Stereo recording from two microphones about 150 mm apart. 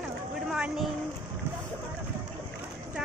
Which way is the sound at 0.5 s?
5° right (ahead or behind).